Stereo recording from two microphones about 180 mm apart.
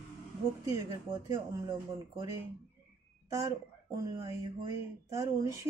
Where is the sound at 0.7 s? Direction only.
15° right (ahead or behind).